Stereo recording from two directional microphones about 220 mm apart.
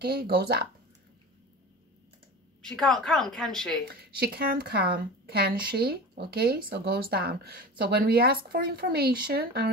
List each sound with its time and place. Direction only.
0.0 s a woman's voice: 45° right (ahead or behind)
2.6 s a woman's voice: centre (ahead or behind)
4.0 s a woman's voice: 45° right (ahead or behind)